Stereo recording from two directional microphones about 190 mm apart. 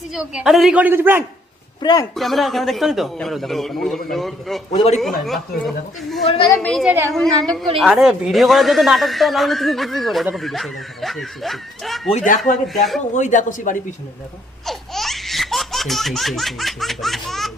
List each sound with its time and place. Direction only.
0.1 s a man's voice: 5° right (ahead or behind)
1.8 s a man's voice: 20° left (ahead or behind)
2.1 s a man's voice: centre (ahead or behind)
4.7 s speech: 35° left (ahead or behind)
4.9 s a man's voice: centre (ahead or behind)
6.8 s a woman's voice: 10° right (ahead or behind)
7.1 s a man's voice: 5° left (ahead or behind)
12.1 s speech: 45° left (ahead or behind)
12.6 s a man's voice: centre (ahead or behind)
13.1 s speech: 40° left (ahead or behind)
14.7 s laughter: centre (ahead or behind)